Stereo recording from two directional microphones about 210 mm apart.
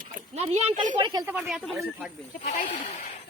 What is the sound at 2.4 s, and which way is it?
Speech, 35° left (ahead or behind).